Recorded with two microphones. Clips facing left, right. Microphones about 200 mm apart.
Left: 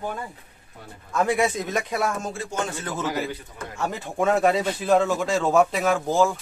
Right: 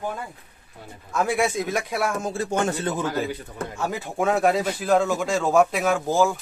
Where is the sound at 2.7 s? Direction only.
35° right (ahead or behind).